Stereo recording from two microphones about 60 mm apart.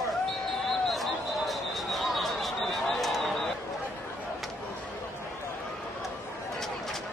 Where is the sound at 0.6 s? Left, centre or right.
Centre.